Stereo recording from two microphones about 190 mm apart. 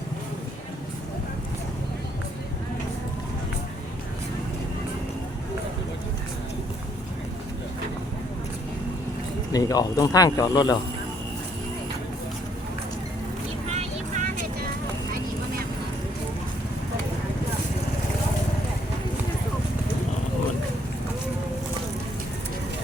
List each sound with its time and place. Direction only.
9.5 s speech: 20° left (ahead or behind)
13.7 s vehicle: 40° right (ahead or behind)